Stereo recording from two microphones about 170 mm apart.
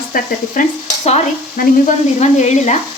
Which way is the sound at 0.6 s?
50° left (ahead or behind).